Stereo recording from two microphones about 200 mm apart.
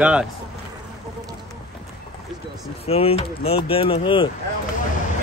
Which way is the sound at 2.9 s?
30° left (ahead or behind).